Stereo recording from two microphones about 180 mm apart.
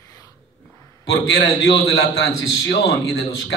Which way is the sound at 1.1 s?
70° left (ahead or behind).